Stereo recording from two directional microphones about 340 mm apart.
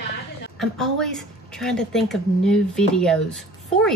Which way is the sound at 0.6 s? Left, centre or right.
Centre.